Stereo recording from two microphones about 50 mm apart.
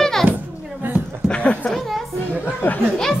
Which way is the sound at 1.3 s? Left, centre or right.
Left.